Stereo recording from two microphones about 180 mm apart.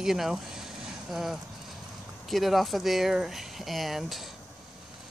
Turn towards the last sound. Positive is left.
turn(degrees=0)  # may be behind; listen again after turning